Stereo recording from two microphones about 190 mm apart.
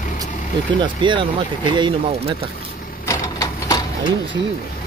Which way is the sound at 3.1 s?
15° left (ahead or behind).